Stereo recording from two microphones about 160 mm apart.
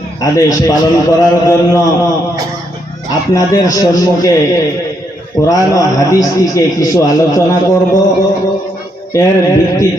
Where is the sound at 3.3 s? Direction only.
20° left (ahead or behind).